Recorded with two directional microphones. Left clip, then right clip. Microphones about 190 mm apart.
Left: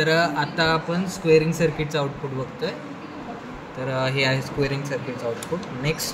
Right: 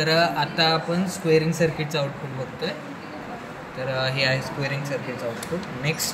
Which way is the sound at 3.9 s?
35° left (ahead or behind).